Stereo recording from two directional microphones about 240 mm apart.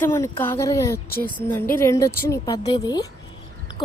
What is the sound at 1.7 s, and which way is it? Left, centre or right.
Speech, centre.